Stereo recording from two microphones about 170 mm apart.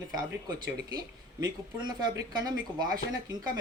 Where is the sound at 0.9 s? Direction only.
25° right (ahead or behind).